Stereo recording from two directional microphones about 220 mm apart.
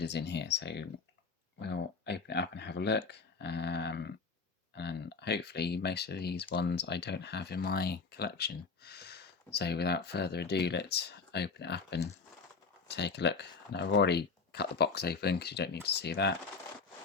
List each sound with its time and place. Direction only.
0.0 s speech: 50° left (ahead or behind)